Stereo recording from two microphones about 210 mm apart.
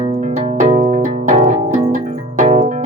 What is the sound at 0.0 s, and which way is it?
Music, 35° right (ahead or behind).